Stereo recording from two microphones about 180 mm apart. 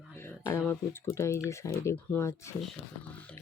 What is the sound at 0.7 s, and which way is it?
Speech, 15° left (ahead or behind).